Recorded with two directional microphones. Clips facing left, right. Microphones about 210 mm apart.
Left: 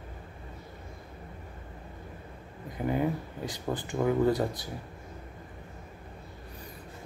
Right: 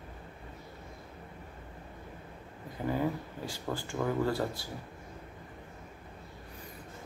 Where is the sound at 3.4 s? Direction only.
20° left (ahead or behind).